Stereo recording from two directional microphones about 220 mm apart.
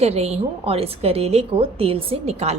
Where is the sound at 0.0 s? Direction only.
30° right (ahead or behind).